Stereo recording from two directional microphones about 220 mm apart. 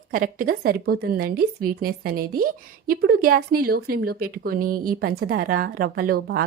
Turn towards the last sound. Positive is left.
turn(degrees=-45)  # may be behind; listen again after turning